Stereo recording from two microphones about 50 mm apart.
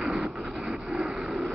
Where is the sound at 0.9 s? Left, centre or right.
Centre.